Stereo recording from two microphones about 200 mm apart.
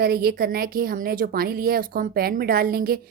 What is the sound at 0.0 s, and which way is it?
Speech, 50° right (ahead or behind).